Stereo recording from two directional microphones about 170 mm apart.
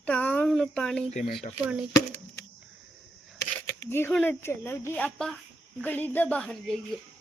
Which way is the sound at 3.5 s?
15° left (ahead or behind).